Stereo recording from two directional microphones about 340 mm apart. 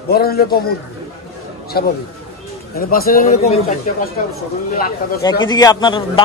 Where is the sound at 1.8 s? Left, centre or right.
Left.